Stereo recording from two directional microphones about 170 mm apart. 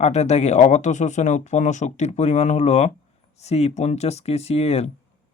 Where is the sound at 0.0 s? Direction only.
40° left (ahead or behind).